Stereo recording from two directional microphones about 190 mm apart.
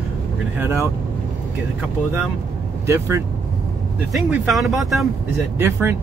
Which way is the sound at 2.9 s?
15° right (ahead or behind).